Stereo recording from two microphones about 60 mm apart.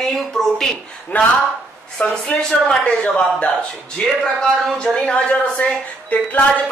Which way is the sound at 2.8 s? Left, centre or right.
Centre.